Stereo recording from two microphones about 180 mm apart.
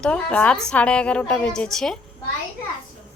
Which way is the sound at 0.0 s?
5° left (ahead or behind).